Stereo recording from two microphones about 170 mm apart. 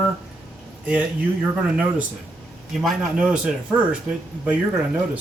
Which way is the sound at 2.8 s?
5° right (ahead or behind).